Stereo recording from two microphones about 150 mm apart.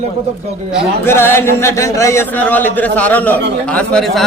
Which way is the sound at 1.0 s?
15° left (ahead or behind).